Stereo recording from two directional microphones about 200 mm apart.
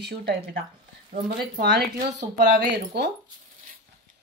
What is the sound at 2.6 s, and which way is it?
Speech, 55° right (ahead or behind).